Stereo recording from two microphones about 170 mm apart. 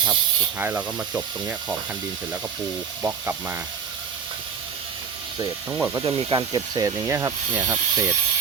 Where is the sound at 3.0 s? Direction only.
10° right (ahead or behind).